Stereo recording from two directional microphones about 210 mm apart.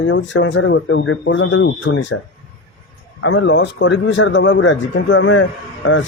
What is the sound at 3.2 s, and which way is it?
Speech, 65° left (ahead or behind).